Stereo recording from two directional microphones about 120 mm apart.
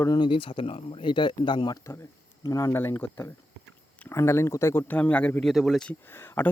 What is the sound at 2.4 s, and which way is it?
Speech, 30° left (ahead or behind).